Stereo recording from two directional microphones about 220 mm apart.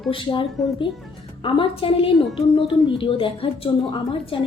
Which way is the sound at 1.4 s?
25° left (ahead or behind).